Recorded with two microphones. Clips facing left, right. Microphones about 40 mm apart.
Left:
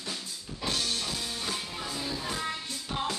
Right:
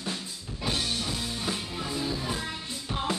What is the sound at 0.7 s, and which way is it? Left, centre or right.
Music, centre.